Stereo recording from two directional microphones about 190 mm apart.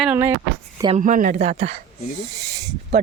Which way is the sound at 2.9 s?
35° right (ahead or behind).